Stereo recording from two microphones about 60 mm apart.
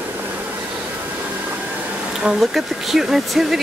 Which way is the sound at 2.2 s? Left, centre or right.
Centre.